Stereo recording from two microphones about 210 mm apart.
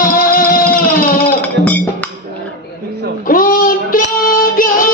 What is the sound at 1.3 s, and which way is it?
Music, 10° left (ahead or behind).